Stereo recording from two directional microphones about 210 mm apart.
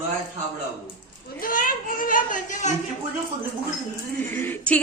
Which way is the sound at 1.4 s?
40° left (ahead or behind).